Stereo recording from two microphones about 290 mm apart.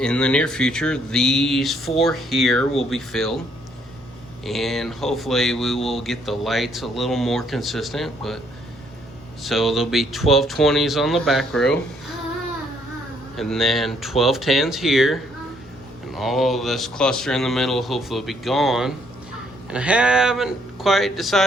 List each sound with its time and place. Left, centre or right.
0.0 s speech: centre
4.4 s speech: centre
9.4 s speech: centre
13.3 s speech: centre